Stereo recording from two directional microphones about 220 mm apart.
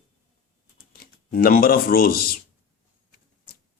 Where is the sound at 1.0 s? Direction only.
40° left (ahead or behind).